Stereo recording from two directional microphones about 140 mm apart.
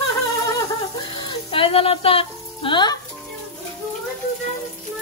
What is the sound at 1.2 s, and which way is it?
Music, 40° left (ahead or behind).